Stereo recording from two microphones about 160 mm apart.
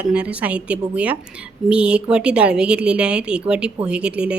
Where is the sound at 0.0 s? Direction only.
5° right (ahead or behind).